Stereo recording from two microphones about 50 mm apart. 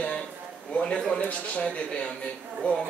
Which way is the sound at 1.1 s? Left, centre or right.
Left.